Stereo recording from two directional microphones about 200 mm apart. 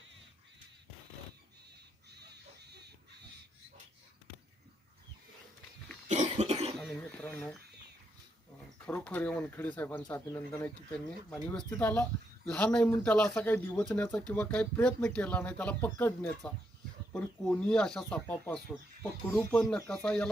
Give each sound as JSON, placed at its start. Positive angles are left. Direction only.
{"t": 2.0, "sound": "pig", "side_deg": -55}
{"t": 6.1, "sound": "cough", "side_deg": -35}
{"t": 6.7, "sound": "a sound", "side_deg": 5}
{"t": 8.9, "sound": "speech", "side_deg": 5}